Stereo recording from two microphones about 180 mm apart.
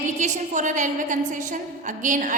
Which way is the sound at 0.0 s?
45° right (ahead or behind).